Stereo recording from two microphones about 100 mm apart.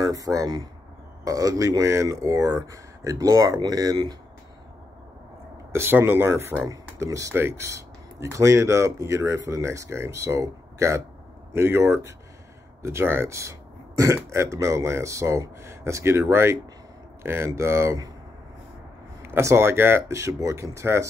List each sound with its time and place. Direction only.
0.0 s speech: 35° right (ahead or behind)
5.7 s speech: 25° right (ahead or behind)
19.2 s speech: 25° right (ahead or behind)